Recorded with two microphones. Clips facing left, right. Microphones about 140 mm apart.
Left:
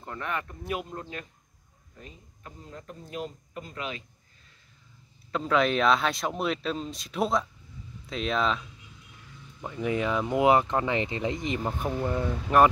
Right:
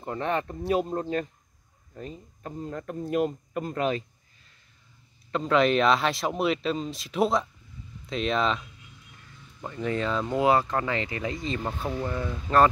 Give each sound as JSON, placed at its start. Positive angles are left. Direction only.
{"t": 0.0, "sound": "speech", "side_deg": -25}
{"t": 2.8, "sound": "speech", "side_deg": -55}
{"t": 5.3, "sound": "speech", "side_deg": 0}